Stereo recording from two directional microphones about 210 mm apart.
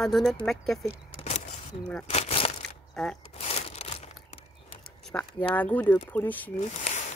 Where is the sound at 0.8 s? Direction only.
30° left (ahead or behind).